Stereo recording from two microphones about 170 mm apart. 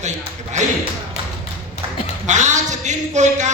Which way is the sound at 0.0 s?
45° right (ahead or behind).